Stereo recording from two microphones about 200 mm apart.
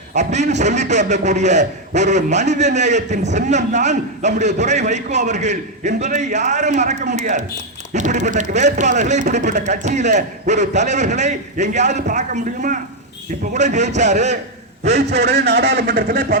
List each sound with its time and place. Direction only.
0.1 s a man's voice: 35° right (ahead or behind)
15.2 s a man's voice: 55° right (ahead or behind)